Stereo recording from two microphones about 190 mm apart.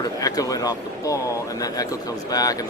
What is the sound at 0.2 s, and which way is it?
Speech, 20° left (ahead or behind).